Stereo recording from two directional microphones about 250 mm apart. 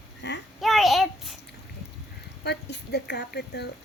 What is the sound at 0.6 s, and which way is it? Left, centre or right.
Child singing, centre.